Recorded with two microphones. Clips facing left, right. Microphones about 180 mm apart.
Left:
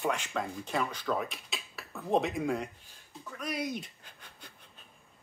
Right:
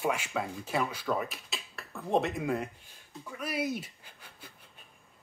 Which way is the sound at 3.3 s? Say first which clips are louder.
Right 2 dB; 5° right (ahead or behind).